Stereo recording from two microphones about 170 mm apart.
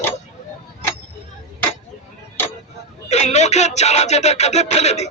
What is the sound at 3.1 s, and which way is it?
Music, 40° left (ahead or behind).